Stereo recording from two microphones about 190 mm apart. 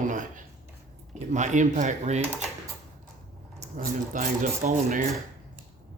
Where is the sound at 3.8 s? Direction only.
45° right (ahead or behind).